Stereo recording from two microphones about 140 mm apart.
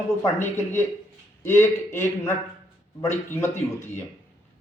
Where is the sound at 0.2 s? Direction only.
15° left (ahead or behind).